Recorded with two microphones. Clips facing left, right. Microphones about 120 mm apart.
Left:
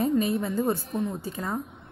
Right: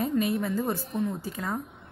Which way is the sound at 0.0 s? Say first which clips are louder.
Left 2 dB; centre (ahead or behind).